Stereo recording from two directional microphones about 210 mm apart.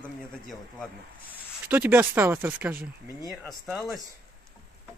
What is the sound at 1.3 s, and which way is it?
Speech, 10° right (ahead or behind).